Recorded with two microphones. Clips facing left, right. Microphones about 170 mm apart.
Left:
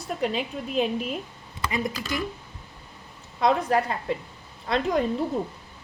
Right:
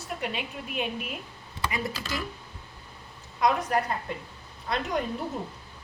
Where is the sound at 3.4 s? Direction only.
30° left (ahead or behind).